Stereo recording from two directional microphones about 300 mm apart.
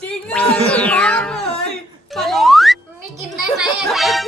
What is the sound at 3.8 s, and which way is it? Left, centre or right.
Speech, centre.